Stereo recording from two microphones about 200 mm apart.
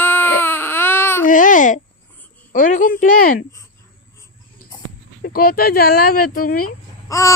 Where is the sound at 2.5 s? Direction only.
40° left (ahead or behind).